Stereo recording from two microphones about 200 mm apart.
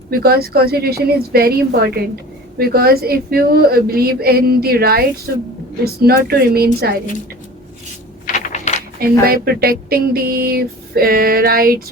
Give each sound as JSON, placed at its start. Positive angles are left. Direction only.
{"t": 0.1, "sound": "speech", "side_deg": -50}
{"t": 8.3, "sound": "typing", "side_deg": 35}
{"t": 9.0, "sound": "speech", "side_deg": -50}